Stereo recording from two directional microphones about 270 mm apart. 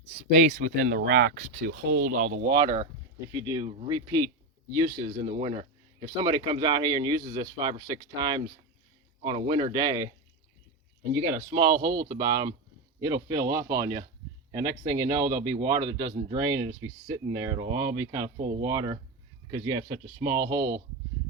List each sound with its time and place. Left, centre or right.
0.5 s speech: right; by 10.1 s centre
11.3 s speech: centre